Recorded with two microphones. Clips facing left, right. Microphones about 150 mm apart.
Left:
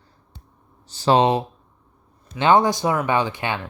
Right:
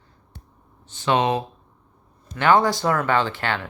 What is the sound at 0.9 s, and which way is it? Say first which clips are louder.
Speech: left 4 dB; 35° left (ahead or behind).